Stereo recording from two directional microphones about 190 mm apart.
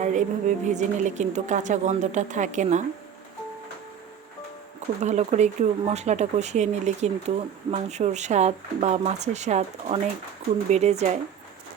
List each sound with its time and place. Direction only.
0.0 s speech: 40° right (ahead or behind)
4.9 s speech: 35° right (ahead or behind)